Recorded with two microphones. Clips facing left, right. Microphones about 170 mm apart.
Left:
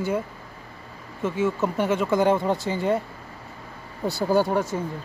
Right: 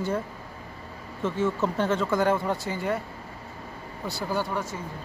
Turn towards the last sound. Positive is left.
turn(degrees=40)  # may be behind; listen again after turning